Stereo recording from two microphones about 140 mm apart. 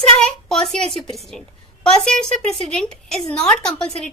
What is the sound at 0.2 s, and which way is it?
A woman's voice, 5° left (ahead or behind).